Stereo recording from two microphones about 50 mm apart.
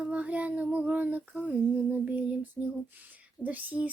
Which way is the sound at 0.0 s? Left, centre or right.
Right.